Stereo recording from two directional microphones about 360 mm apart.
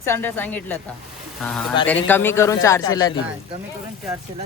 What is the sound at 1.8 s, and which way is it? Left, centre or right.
A man's voice, centre.